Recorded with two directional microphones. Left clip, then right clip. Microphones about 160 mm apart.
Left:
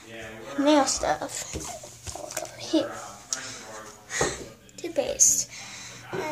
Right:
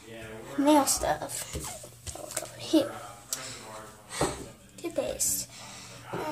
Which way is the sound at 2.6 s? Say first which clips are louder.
Even; 25° right (ahead or behind).